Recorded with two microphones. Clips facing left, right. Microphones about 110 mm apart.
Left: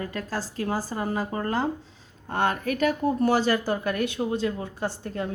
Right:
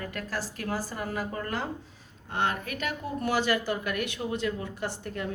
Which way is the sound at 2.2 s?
40° left (ahead or behind).